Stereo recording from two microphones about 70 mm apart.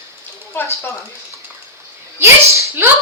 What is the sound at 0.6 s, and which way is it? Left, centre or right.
Speech, left.